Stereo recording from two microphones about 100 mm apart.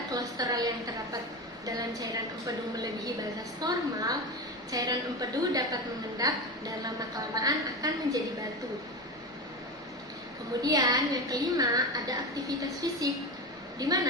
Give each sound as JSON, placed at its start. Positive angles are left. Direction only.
{"t": 0.1, "sound": "a woman's voice", "side_deg": -40}
{"t": 3.6, "sound": "a woman's voice", "side_deg": -40}
{"t": 10.6, "sound": "a woman's voice", "side_deg": -40}